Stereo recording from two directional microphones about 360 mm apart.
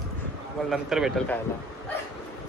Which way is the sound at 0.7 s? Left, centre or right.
Centre.